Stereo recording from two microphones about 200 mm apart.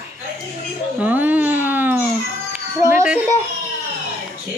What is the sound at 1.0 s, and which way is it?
Babbling, 10° right (ahead or behind).